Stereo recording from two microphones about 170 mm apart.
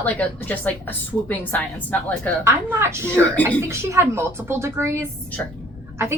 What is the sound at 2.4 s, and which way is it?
A woman's voice, 15° right (ahead or behind).